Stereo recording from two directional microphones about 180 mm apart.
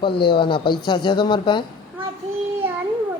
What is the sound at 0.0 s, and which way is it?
Speech, 25° left (ahead or behind).